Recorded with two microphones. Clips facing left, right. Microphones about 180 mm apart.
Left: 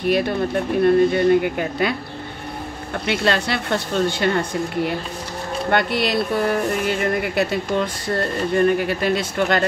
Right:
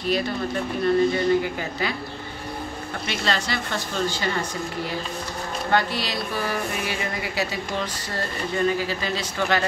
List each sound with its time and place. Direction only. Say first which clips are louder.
0.0 s speech: left 5 dB; 60° left (ahead or behind)
3.1 s speech: left 6 dB; 60° left (ahead or behind)